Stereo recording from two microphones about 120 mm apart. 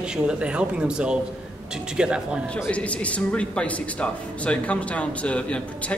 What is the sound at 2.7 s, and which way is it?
Speech, 10° left (ahead or behind).